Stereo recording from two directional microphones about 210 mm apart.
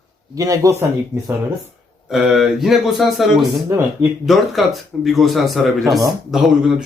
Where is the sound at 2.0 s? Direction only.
Centre (ahead or behind).